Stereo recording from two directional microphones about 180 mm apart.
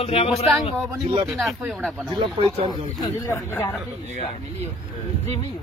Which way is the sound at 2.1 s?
30° right (ahead or behind).